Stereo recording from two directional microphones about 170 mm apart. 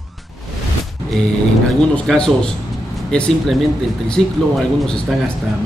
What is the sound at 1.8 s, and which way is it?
A man's voice, 5° left (ahead or behind).